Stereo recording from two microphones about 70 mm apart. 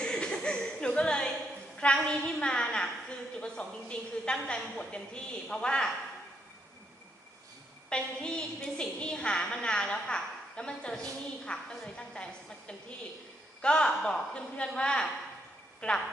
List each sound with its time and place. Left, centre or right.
0.0 s chuckle: centre
2.0 s a woman's voice: centre
7.9 s a woman's voice: centre